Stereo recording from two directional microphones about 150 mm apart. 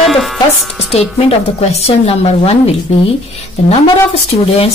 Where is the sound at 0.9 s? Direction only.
45° left (ahead or behind).